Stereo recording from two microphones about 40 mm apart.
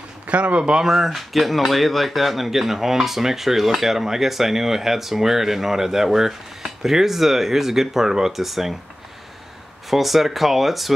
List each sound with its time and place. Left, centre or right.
0.3 s speech: right
0.8 s speech: centre
9.8 s speech: centre